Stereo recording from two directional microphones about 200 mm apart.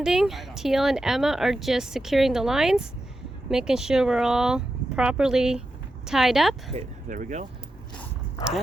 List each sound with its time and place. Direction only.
0.0 s speech: centre (ahead or behind)
6.7 s speech: 40° right (ahead or behind)